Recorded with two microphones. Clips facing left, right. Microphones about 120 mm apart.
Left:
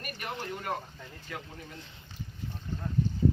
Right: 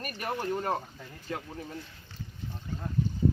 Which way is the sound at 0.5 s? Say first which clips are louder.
Right 5 dB; 35° right (ahead or behind).